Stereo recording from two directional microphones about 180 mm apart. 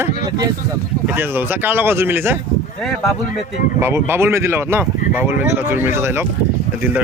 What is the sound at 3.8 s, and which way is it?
Speech, 15° right (ahead or behind).